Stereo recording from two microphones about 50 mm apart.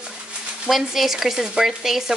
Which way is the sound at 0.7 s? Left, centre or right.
Centre.